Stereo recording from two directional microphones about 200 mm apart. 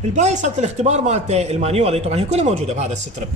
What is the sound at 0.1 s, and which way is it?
A man's voice, 35° right (ahead or behind).